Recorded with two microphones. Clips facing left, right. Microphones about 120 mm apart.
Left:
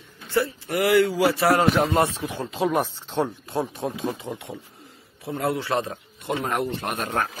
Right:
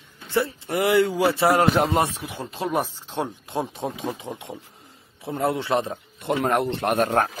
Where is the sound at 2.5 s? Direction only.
Centre (ahead or behind).